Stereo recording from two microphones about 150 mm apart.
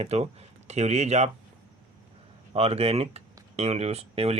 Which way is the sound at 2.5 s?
45° right (ahead or behind).